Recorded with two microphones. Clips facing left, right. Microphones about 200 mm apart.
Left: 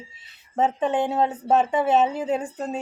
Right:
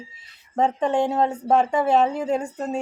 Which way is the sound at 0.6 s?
5° left (ahead or behind).